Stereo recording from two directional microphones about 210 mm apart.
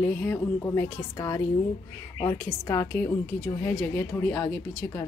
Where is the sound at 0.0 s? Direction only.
10° left (ahead or behind).